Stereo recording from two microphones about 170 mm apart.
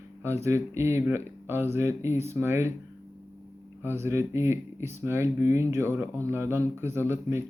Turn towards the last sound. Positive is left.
turn(degrees=-15)  # may be behind; listen again after turning